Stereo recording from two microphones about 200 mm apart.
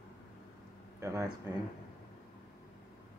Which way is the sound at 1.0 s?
15° right (ahead or behind).